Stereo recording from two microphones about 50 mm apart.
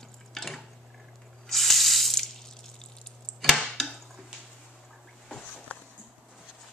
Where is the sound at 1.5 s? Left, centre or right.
Centre.